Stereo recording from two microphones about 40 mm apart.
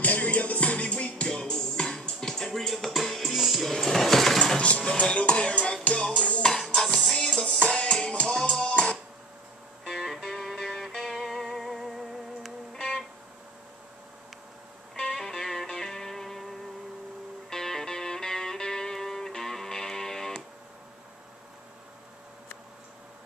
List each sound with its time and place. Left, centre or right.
0.0 s music: left
1.3 s music: centre
3.7 s a sound: centre
4.9 s music: left
6.7 s music: centre
7.6 s music: left
8.4 s music: centre
9.8 s music: centre
15.1 s music: centre